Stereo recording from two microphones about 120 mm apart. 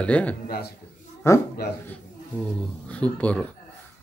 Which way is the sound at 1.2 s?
25° left (ahead or behind).